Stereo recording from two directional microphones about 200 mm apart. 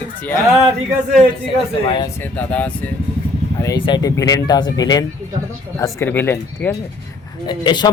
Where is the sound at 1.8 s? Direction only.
25° left (ahead or behind).